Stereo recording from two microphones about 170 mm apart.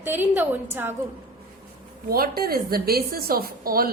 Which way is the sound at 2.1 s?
60° right (ahead or behind).